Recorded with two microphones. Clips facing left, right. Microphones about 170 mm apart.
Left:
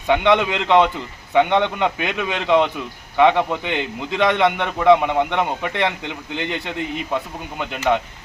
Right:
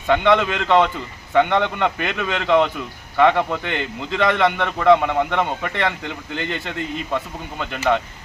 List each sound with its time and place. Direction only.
0.1 s a man's voice: 15° left (ahead or behind)